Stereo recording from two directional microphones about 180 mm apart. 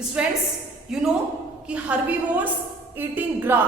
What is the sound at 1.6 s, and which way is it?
A woman's voice, 5° right (ahead or behind).